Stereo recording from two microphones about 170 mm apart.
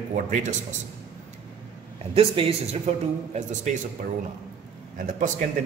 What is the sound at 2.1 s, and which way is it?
Speech, 35° right (ahead or behind).